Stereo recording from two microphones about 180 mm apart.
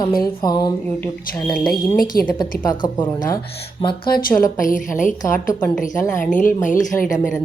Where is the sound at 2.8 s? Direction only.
25° left (ahead or behind).